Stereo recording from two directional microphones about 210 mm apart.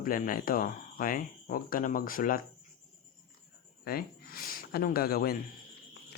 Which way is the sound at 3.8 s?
45° left (ahead or behind).